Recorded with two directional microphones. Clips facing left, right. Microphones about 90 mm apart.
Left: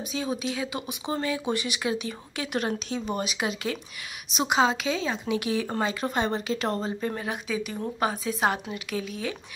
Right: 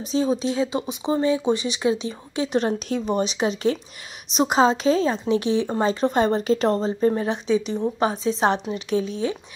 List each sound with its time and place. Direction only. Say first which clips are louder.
0.1 s a woman's voice: right 9 dB; 30° right (ahead or behind)